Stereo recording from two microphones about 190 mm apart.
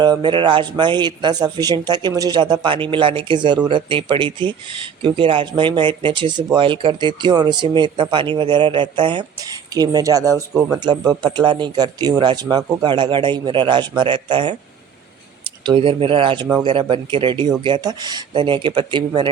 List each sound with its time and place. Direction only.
0.0 s speech: 25° right (ahead or behind)